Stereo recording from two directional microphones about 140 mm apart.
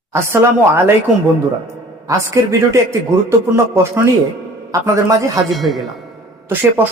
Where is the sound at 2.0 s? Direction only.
20° right (ahead or behind).